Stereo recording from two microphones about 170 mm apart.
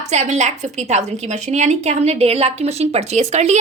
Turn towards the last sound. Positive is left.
turn(degrees=-40)  # may be behind; listen again after turning